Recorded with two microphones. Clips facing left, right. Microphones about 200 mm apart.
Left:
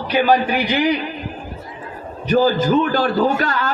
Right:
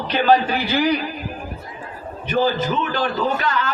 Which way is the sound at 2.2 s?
40° left (ahead or behind).